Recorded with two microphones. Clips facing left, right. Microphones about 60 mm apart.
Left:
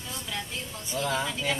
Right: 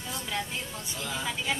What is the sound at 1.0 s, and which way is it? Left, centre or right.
Speech, left.